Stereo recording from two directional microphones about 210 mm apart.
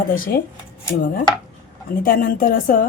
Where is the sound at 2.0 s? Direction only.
45° left (ahead or behind).